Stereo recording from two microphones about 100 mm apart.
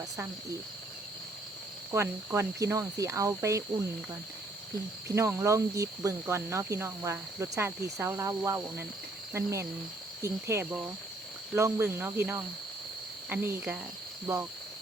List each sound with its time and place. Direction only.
1.9 s cricket: 30° right (ahead or behind)
5.0 s speech: 30° right (ahead or behind)